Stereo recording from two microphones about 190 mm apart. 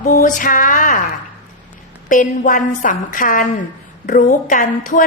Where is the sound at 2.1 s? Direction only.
45° left (ahead or behind).